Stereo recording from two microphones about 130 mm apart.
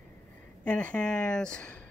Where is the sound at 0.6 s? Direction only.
10° left (ahead or behind).